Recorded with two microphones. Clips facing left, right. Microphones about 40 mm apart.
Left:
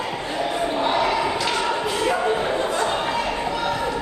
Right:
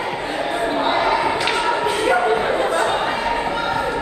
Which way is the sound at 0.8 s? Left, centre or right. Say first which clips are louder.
Right 2 dB; right.